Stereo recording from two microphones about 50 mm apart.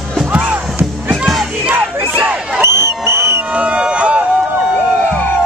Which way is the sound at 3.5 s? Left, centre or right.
Right.